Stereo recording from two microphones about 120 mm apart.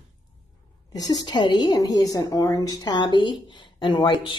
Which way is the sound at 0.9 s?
35° left (ahead or behind).